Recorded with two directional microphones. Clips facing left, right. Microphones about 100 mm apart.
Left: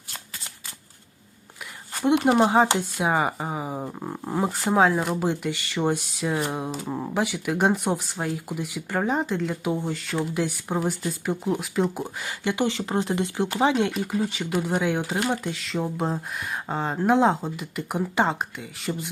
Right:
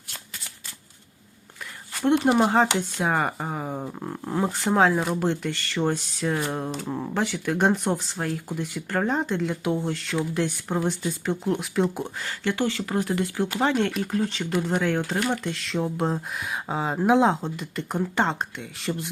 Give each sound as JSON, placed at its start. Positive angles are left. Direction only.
{"t": 2.2, "sound": "speech", "side_deg": 5}
{"t": 12.2, "sound": "speech", "side_deg": 15}